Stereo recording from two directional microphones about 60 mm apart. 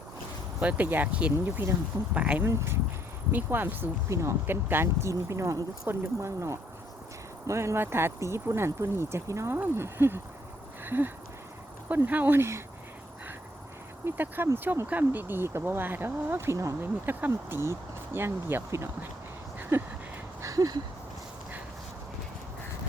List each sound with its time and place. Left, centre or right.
0.6 s speech: right
1.5 s speech: right
2.1 s speech: right
2.4 s speech: right
3.3 s speech: right
4.1 s speech: right
4.4 s speech: right
5.0 s speech: right
9.5 s speech: right
10.8 s a sound: right
12.0 s speech: right
14.0 s speech: right
16.8 s speech: right
20.4 s a sound: right